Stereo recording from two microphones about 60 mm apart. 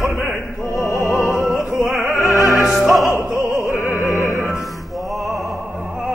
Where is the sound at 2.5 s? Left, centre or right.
Centre.